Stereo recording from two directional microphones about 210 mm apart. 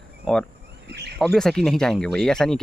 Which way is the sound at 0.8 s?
50° right (ahead or behind).